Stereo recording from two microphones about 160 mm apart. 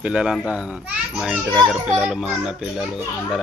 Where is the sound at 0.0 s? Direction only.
5° right (ahead or behind).